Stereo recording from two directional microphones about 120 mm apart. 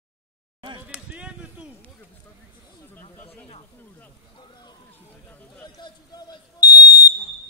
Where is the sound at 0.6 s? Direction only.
40° right (ahead or behind).